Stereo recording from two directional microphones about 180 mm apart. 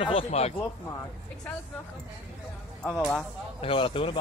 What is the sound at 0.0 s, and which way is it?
Speech, 30° left (ahead or behind).